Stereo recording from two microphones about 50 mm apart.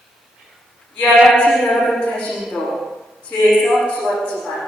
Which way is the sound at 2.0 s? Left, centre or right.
Left.